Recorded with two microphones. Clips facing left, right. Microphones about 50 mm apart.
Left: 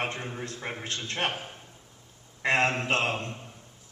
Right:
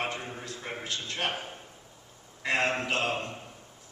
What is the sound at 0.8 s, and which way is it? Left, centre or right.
Speech, left.